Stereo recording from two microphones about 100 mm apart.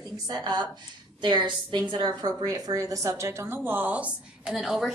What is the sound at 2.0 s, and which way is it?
A woman's voice, 40° right (ahead or behind).